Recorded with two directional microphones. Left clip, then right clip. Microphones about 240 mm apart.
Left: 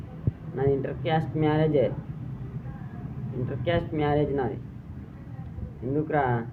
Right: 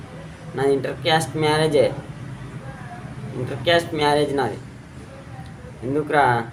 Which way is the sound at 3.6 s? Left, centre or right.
Centre.